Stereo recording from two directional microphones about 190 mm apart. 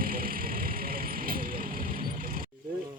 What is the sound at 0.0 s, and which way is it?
Vehicle, 50° right (ahead or behind).